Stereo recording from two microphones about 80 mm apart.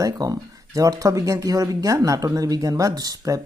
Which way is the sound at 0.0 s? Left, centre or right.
Right.